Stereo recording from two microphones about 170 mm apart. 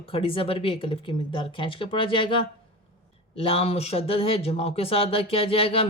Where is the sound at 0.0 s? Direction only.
35° left (ahead or behind).